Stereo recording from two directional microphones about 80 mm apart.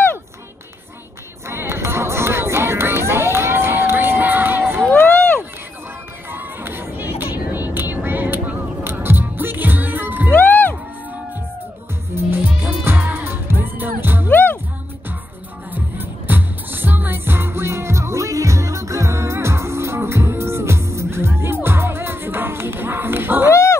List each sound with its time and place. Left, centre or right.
1.5 s music: right
5.1 s run: left
6.3 s vehicle: right
10.3 s music: left
12.2 s music: right
14.3 s music: left
15.7 s music: right
23.5 s dog: left